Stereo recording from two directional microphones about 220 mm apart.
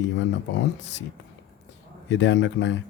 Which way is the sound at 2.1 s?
55° left (ahead or behind).